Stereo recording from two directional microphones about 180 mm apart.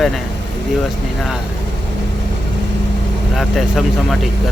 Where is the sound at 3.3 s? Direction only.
Centre (ahead or behind).